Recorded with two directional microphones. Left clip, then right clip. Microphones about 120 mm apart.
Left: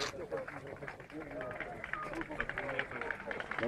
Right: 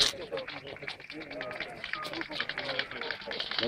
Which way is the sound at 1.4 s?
40° right (ahead or behind).